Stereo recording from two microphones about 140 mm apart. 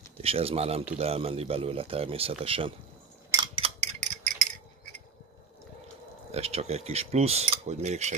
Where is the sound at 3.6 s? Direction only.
55° right (ahead or behind).